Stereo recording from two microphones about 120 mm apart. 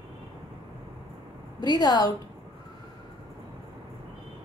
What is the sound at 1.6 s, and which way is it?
Speech, 35° left (ahead or behind).